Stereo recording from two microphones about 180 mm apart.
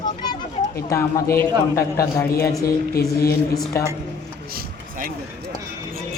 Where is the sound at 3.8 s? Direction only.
15° left (ahead or behind).